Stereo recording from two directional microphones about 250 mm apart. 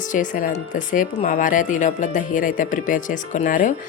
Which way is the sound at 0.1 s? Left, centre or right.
Left.